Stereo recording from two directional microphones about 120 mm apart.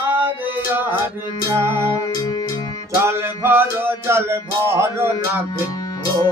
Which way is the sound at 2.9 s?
20° right (ahead or behind).